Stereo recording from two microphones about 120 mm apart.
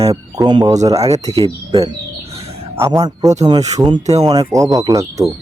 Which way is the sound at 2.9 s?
30° right (ahead or behind).